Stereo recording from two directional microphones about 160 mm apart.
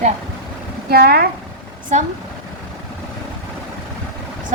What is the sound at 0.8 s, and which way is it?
Speech, 75° right (ahead or behind).